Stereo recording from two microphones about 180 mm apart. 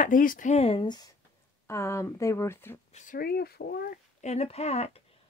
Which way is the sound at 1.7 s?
15° left (ahead or behind).